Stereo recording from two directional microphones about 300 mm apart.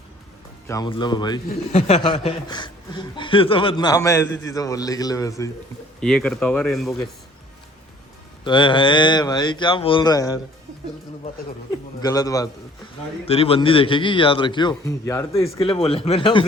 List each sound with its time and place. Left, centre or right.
0.7 s speech: centre
8.4 s speech: centre
12.0 s a man's voice: centre